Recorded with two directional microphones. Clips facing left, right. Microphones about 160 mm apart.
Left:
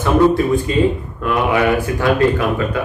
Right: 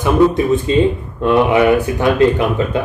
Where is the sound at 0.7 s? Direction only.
25° right (ahead or behind).